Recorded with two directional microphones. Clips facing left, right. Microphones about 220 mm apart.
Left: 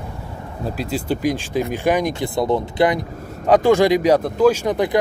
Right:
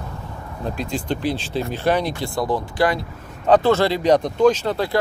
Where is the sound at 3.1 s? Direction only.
40° left (ahead or behind).